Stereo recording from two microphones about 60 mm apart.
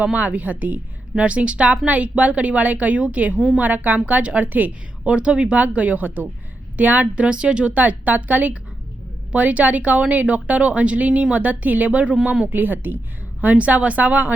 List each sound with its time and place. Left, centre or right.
0.0 s a woman's voice: right
3.3 s a woman's voice: centre
3.6 s a woman's voice: right
12.5 s a woman's voice: right